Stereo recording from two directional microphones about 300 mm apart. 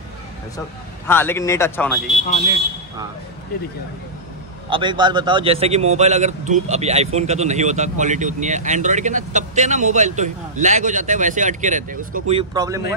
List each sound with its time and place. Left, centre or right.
1.0 s speech: centre
2.2 s speech: left
4.6 s a man's voice: centre